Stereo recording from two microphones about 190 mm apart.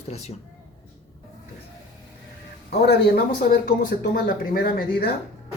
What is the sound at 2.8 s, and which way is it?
Speech, 50° left (ahead or behind).